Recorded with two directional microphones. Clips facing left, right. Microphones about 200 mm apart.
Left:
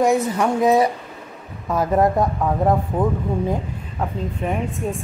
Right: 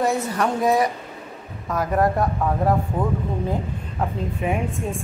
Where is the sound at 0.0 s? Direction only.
15° left (ahead or behind).